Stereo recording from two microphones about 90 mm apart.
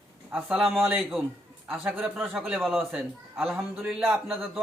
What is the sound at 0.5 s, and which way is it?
Speech, centre (ahead or behind).